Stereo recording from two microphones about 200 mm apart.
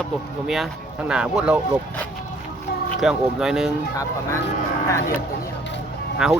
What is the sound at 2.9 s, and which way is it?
Speech, centre (ahead or behind).